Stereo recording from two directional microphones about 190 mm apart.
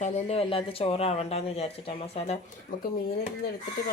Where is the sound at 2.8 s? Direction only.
55° left (ahead or behind).